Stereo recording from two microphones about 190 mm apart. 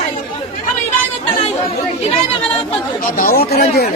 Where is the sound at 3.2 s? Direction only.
50° left (ahead or behind).